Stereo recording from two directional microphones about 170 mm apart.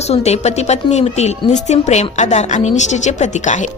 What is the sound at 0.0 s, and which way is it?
Speech, 40° left (ahead or behind).